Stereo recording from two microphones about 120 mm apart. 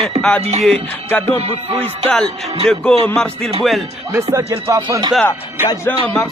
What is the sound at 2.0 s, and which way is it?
Speech, 5° left (ahead or behind).